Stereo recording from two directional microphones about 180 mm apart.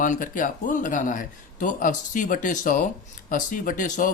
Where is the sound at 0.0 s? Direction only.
45° left (ahead or behind).